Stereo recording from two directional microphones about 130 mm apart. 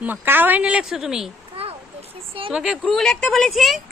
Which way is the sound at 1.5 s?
50° right (ahead or behind).